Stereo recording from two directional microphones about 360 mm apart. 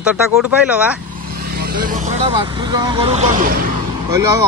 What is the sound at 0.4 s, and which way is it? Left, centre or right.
Speech, centre.